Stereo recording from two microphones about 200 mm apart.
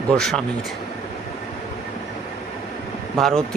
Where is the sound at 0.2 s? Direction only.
Centre (ahead or behind).